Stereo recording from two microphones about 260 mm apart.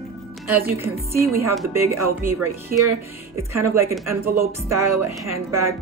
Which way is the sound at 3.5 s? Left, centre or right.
Centre.